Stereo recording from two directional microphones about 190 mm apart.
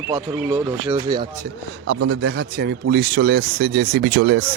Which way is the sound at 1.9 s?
70° right (ahead or behind).